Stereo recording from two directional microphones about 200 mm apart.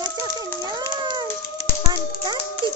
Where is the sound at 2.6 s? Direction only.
25° right (ahead or behind).